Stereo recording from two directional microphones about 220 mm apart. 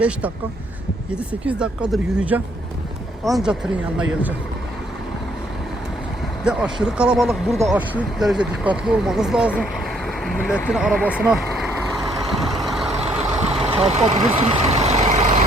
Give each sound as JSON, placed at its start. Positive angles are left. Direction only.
{"t": 1.3, "sound": "speech", "side_deg": -5}
{"t": 6.4, "sound": "speech", "side_deg": -5}
{"t": 12.3, "sound": "vehicle", "side_deg": 0}
{"t": 12.9, "sound": "vehicle", "side_deg": -30}